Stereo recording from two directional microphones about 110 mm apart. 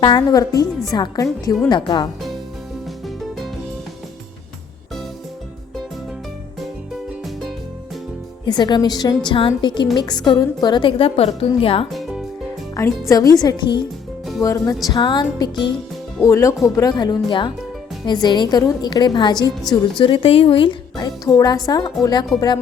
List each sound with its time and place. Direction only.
0.0 s a woman's voice: 40° left (ahead or behind)
8.4 s a woman's voice: 40° left (ahead or behind); by 11.9 s 60° left (ahead or behind)
11.9 s music: centre (ahead or behind)
12.7 s a woman's voice: 25° left (ahead or behind)
14.4 s music: 30° left (ahead or behind)
14.8 s a woman's voice: 45° left (ahead or behind)
16.2 s a woman's voice: 30° left (ahead or behind)
20.0 s a woman's voice: 50° left (ahead or behind)
20.9 s a woman's voice: 35° left (ahead or behind)